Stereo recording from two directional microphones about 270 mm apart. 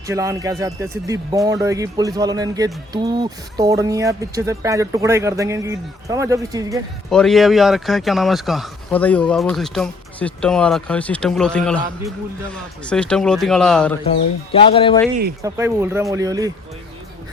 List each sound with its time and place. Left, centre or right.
0.1 s speech: centre
7.1 s speech: centre
14.5 s speech: centre
15.4 s speech: centre